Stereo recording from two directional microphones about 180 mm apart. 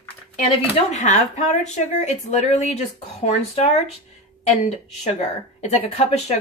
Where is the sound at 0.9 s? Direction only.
40° left (ahead or behind).